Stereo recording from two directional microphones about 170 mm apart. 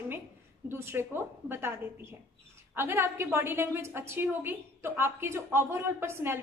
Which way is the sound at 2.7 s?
15° right (ahead or behind).